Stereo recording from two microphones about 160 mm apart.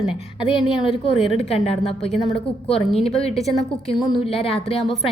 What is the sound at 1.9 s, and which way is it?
Speech, centre (ahead or behind).